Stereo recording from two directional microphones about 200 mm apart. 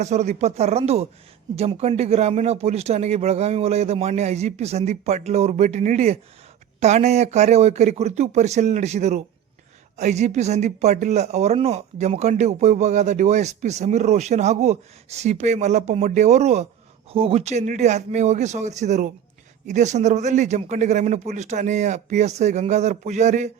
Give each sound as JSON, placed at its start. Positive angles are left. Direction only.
{"t": 0.0, "sound": "speech", "side_deg": -35}